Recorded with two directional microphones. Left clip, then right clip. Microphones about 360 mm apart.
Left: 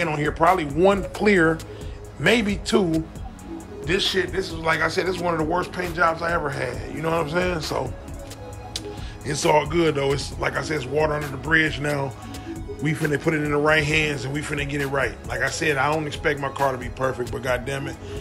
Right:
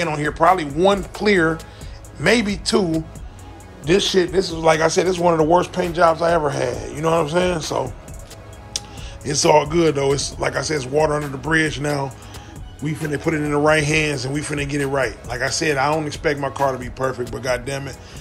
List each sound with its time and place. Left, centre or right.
0.0 s a man's voice: centre